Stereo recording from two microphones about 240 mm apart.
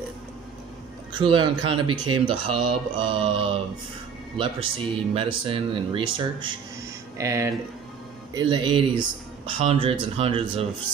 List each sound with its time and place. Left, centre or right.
1.1 s speech: centre